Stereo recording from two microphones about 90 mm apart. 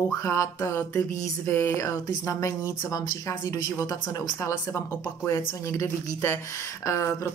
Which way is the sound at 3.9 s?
40° left (ahead or behind).